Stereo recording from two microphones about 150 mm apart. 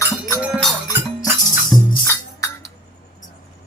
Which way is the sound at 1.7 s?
Centre (ahead or behind).